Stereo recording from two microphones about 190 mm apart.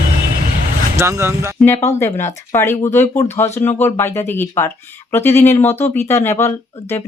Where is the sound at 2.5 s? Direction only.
10° left (ahead or behind).